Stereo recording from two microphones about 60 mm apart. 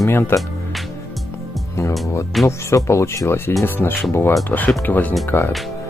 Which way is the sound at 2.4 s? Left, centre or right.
Left.